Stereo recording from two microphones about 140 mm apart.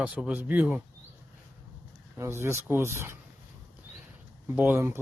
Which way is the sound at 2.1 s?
20° right (ahead or behind).